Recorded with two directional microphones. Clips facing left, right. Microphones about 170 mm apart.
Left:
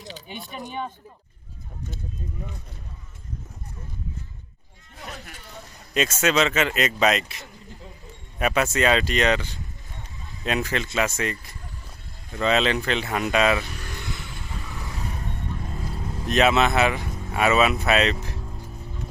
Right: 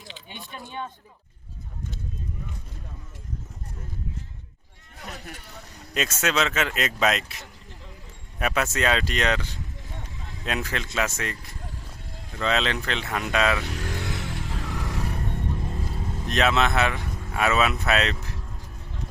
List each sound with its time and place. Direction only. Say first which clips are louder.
0.5 s speech: left 3 dB; 15° left (ahead or behind)
5.9 s speech: left 4 dB; centre (ahead or behind)
12.4 s speech: left 4 dB; 5° left (ahead or behind)
13.7 s vehicle: right 5 dB; 90° right
16.2 s speech: left 3 dB; 5° left (ahead or behind)